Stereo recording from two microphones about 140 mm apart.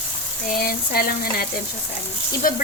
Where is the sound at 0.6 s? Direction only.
90° left.